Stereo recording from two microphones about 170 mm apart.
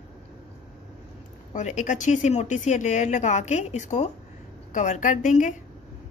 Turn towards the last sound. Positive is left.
turn(degrees=45)  # may be behind; listen again after turning